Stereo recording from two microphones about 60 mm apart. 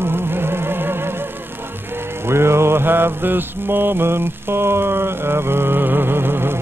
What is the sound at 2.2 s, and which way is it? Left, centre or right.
Mantra, right.